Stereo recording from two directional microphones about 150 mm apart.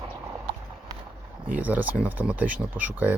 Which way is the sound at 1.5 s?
10° right (ahead or behind).